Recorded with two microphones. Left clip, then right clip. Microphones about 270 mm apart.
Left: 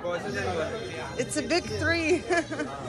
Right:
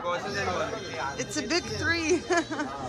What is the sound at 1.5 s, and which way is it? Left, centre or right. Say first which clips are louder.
Speech: left 1 dB; centre.